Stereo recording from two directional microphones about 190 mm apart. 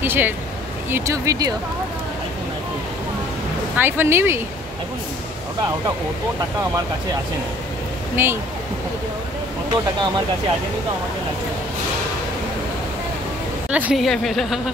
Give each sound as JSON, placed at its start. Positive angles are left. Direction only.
{"t": 0.0, "sound": "speech", "side_deg": -10}
{"t": 3.7, "sound": "speech", "side_deg": -10}
{"t": 8.2, "sound": "speech", "side_deg": -10}
{"t": 13.7, "sound": "a woman's voice", "side_deg": -10}